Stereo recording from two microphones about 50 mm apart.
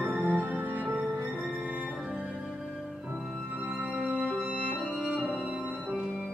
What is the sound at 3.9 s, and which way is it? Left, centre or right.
Music, right.